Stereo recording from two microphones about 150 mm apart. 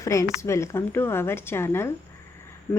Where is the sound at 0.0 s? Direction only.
20° left (ahead or behind).